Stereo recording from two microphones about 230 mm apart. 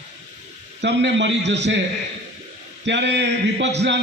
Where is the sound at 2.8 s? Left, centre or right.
Right.